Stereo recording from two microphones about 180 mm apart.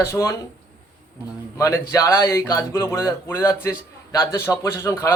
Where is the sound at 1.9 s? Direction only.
15° left (ahead or behind).